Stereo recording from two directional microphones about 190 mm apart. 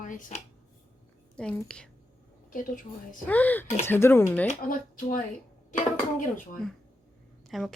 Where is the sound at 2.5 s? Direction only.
45° left (ahead or behind).